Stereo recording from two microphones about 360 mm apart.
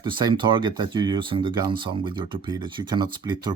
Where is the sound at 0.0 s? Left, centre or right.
Centre.